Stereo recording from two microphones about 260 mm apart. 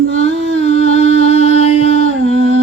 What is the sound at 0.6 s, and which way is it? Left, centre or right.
Humming, left.